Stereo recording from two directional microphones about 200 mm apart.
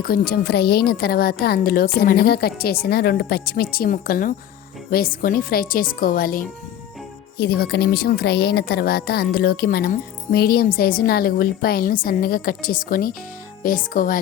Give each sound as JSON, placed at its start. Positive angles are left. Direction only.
{"t": 0.0, "sound": "speech", "side_deg": 50}